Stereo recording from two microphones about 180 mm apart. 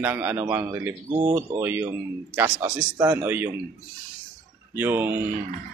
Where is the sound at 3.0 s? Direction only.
10° right (ahead or behind).